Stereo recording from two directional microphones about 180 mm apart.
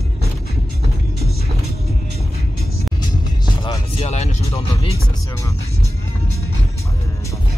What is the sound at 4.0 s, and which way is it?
Music, 35° left (ahead or behind).